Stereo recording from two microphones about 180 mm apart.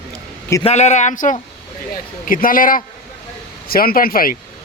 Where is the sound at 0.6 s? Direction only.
35° left (ahead or behind); by 4.3 s 55° left (ahead or behind).